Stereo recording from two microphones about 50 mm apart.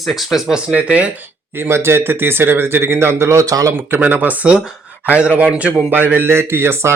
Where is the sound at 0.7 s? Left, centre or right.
Right.